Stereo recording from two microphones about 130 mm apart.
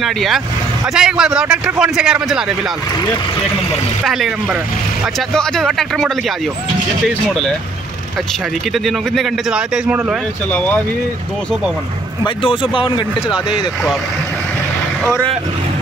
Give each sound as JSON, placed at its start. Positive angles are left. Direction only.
{"t": 0.0, "sound": "a man's voice", "side_deg": 0}
{"t": 4.0, "sound": "a man's voice", "side_deg": 0}
{"t": 5.3, "sound": "a man's voice", "side_deg": 5}
{"t": 7.2, "sound": "a man's voice", "side_deg": 5}
{"t": 8.8, "sound": "a man's voice", "side_deg": 0}
{"t": 12.4, "sound": "speech", "side_deg": 40}
{"t": 13.3, "sound": "a man's voice", "side_deg": -5}